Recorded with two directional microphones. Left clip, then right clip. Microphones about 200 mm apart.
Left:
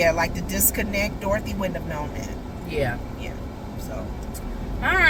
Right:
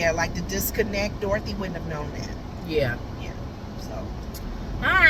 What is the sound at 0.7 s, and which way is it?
Speech, 25° left (ahead or behind).